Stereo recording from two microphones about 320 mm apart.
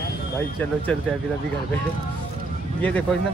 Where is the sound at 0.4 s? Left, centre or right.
Centre.